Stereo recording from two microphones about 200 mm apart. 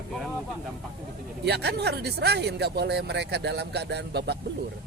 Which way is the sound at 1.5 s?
55° right (ahead or behind).